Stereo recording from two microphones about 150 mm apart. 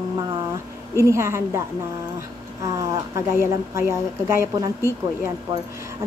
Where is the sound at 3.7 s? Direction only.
20° right (ahead or behind).